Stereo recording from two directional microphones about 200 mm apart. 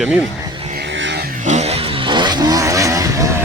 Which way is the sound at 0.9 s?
65° right (ahead or behind).